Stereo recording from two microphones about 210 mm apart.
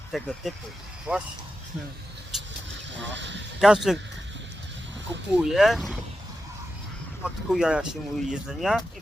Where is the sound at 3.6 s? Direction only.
Centre (ahead or behind).